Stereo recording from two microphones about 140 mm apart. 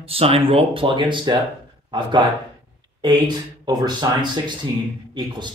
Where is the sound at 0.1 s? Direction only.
45° right (ahead or behind).